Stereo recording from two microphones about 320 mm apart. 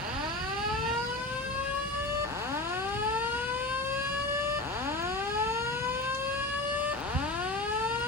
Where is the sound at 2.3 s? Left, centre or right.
Centre.